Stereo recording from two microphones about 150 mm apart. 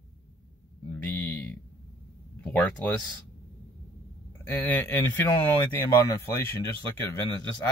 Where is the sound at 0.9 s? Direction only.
10° left (ahead or behind).